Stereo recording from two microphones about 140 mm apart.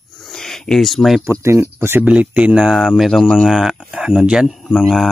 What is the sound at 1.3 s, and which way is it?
Speech, 20° right (ahead or behind).